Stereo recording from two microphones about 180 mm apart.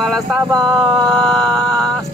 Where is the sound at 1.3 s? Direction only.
20° right (ahead or behind).